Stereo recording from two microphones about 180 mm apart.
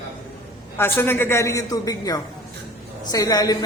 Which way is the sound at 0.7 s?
10° left (ahead or behind).